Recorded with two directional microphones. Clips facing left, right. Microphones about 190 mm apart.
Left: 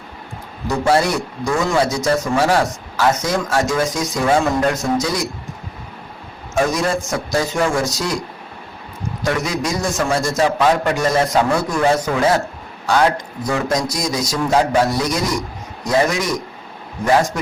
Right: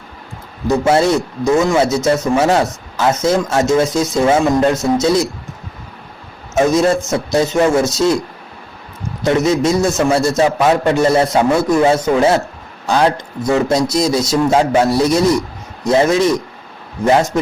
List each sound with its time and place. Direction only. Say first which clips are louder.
0.7 s a man's voice: right 4 dB; 20° right (ahead or behind)
6.5 s a man's voice: right 5 dB; 25° right (ahead or behind)
9.2 s a man's voice: right 7 dB; 25° right (ahead or behind)
17.3 s a man's voice: right 7 dB; 25° right (ahead or behind)